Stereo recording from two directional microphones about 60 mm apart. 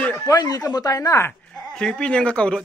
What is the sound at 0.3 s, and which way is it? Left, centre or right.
Speech, left.